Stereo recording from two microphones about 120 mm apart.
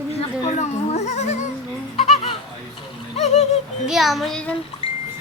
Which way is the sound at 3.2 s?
70° left (ahead or behind).